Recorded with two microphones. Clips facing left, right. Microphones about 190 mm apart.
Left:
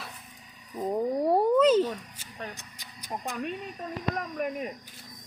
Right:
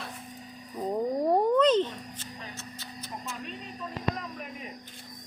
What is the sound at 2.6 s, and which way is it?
Music, 15° left (ahead or behind).